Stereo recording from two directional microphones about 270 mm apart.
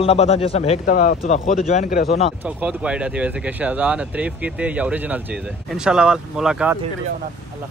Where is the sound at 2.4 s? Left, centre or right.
Centre.